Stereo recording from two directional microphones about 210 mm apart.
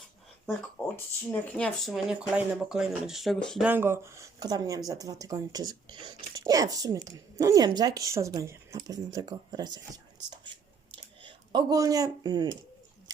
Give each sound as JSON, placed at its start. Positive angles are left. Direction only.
{"t": 1.3, "sound": "speech", "side_deg": 5}
{"t": 3.7, "sound": "speech", "side_deg": -10}